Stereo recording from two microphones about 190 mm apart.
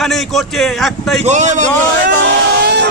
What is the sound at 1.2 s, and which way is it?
Speech, 40° right (ahead or behind).